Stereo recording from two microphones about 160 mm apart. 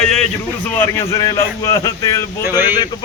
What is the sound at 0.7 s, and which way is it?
Speech, 15° left (ahead or behind).